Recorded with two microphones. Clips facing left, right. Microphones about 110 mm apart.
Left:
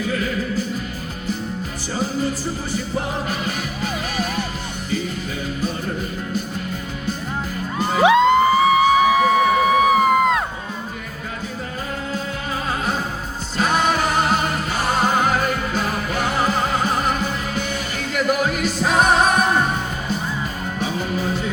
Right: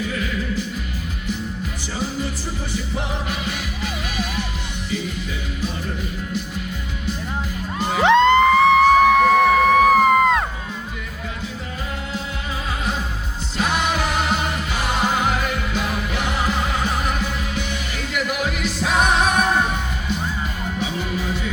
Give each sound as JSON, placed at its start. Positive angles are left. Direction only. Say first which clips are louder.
{"t": 0.1, "sound": "music", "louder": "left 2 dB", "side_deg": 45}
{"t": 2.7, "sound": "music", "louder": "left 2 dB", "side_deg": 45}
{"t": 8.0, "sound": "music", "louder": "even", "side_deg": 5}
{"t": 13.6, "sound": "music", "louder": "left 3 dB", "side_deg": 40}
{"t": 20.7, "sound": "music", "louder": "left 3 dB", "side_deg": 45}